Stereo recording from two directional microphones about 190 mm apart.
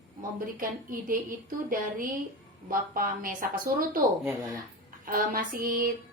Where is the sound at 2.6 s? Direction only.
45° right (ahead or behind).